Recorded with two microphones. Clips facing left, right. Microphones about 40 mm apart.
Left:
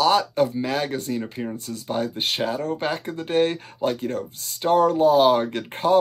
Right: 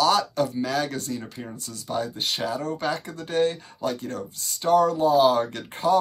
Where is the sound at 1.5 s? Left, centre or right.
Left.